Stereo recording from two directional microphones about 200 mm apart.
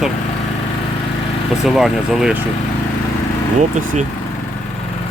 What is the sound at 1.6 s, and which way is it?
Speech, centre (ahead or behind).